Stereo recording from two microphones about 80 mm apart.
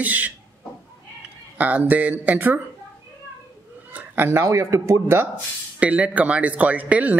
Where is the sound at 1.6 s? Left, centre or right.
Centre.